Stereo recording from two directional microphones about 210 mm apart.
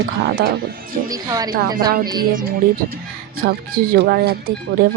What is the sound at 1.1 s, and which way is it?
Speech, 15° right (ahead or behind).